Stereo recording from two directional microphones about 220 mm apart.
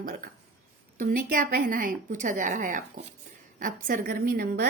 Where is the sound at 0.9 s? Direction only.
40° right (ahead or behind).